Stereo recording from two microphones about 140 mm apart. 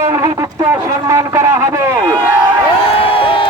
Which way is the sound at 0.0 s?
20° right (ahead or behind).